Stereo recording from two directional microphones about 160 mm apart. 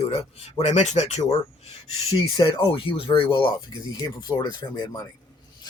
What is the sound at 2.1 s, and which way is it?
Speech, 30° left (ahead or behind).